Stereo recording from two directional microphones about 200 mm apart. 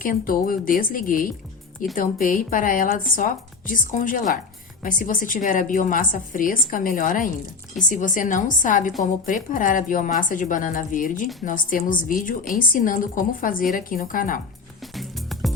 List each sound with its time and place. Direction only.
0.0 s a woman's voice: 45° left (ahead or behind)
14.8 s music: centre (ahead or behind)